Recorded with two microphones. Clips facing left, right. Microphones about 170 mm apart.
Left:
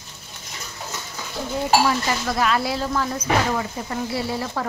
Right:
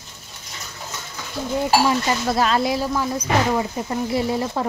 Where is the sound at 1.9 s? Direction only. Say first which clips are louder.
Right 2 dB; 30° right (ahead or behind).